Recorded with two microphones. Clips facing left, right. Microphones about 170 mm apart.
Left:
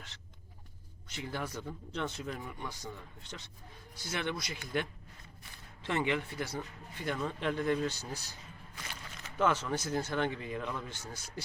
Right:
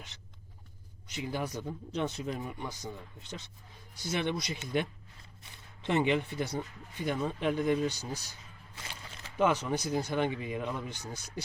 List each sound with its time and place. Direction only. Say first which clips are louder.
1.0 s speech: right 4 dB; 15° right (ahead or behind)
8.7 s a sound: right 1 dB; 25° right (ahead or behind)
9.4 s speech: right 2 dB; 15° right (ahead or behind)